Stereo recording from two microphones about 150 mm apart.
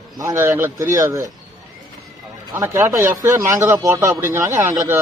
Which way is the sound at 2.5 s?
15° right (ahead or behind).